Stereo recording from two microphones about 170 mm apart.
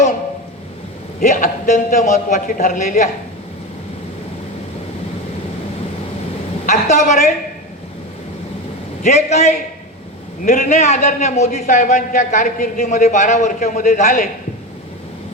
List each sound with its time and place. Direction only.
1.2 s a man's voice: 45° left (ahead or behind)
6.7 s a man's voice: 45° left (ahead or behind)
9.0 s a man's voice: 40° left (ahead or behind)